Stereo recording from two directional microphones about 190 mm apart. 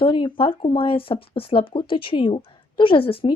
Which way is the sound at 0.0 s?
25° left (ahead or behind).